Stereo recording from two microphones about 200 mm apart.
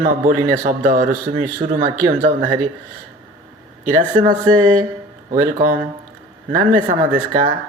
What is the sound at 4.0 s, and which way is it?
Speech, 40° right (ahead or behind).